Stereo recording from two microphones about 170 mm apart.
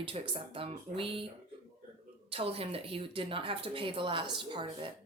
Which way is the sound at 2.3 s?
35° right (ahead or behind).